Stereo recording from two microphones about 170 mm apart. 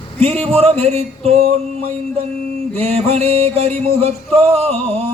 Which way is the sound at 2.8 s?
35° right (ahead or behind).